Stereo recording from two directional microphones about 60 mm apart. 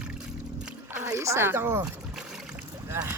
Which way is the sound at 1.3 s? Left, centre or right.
Right.